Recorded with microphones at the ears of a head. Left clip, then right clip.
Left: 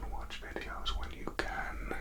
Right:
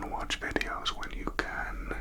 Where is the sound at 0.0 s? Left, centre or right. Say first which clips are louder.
Right 11 dB; right.